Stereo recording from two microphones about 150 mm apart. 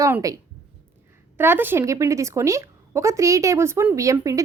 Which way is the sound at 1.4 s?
15° right (ahead or behind).